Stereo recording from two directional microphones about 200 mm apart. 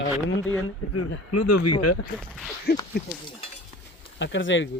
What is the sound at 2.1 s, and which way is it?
Speech, centre (ahead or behind).